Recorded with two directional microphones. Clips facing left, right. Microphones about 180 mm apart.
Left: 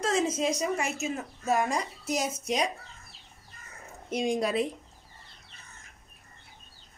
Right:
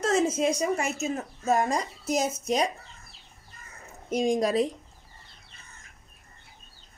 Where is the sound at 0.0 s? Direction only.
50° right (ahead or behind).